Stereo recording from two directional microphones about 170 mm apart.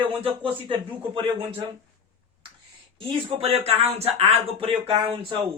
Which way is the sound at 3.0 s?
35° right (ahead or behind).